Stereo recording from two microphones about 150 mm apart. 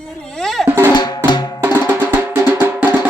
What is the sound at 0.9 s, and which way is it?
Music, 25° left (ahead or behind).